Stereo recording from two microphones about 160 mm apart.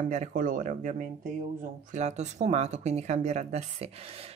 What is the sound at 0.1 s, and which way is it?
Speech, 55° right (ahead or behind).